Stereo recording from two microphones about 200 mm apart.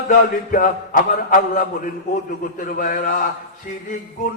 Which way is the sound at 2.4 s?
45° left (ahead or behind).